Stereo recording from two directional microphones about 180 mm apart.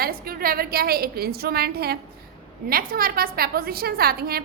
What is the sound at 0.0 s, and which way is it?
A woman's voice, 55° right (ahead or behind).